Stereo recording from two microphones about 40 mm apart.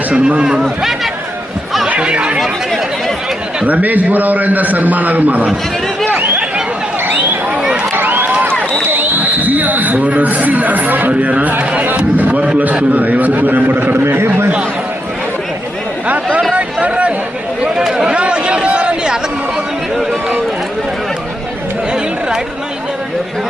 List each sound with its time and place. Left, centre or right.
0.1 s a man's voice: right
0.6 s speech: centre
2.0 s chatter: right
3.7 s a man's voice: right
6.1 s a sound: right
7.9 s run: right
9.0 s a sound: right
11.2 s a man's voice: right
16.0 s a sound: right
17.9 s chatter: centre
18.2 s a sound: right
20.0 s run: centre